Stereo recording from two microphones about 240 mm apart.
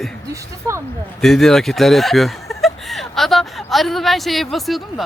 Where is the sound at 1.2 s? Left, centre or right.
Centre.